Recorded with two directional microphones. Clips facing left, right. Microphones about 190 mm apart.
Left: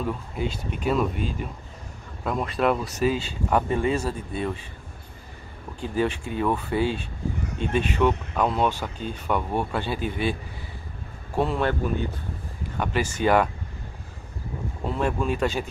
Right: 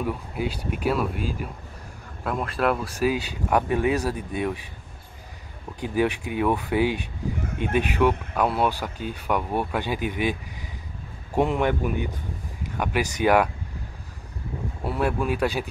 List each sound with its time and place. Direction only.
0.0 s speech: 10° right (ahead or behind)
5.8 s speech: 15° right (ahead or behind)
7.4 s speech: 55° right (ahead or behind)
7.7 s speech: 10° right (ahead or behind)
11.3 s speech: 15° right (ahead or behind)
14.9 s speech: 10° right (ahead or behind)